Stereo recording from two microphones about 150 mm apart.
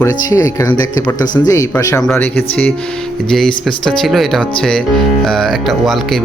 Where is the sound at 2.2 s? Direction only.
10° left (ahead or behind).